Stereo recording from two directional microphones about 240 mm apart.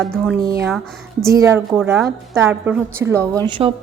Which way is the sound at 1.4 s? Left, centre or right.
Centre.